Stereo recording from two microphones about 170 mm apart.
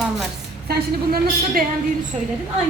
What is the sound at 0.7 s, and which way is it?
Speech, 65° right (ahead or behind).